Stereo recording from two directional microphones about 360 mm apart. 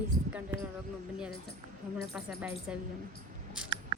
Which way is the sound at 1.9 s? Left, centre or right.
Centre.